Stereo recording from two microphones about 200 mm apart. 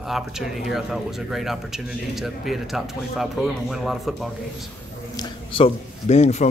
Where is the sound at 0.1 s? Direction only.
Centre (ahead or behind).